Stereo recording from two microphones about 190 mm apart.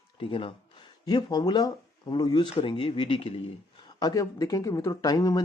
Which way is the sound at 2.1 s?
25° left (ahead or behind).